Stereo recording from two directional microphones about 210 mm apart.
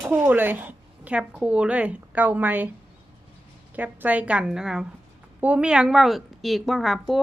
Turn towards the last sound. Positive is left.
turn(degrees=0)  # may be behind; listen again after turning